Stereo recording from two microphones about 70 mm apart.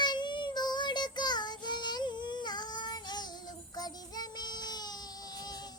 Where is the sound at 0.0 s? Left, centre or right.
Left.